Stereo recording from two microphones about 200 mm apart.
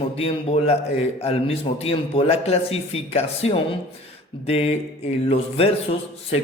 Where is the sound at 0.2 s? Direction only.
30° left (ahead or behind).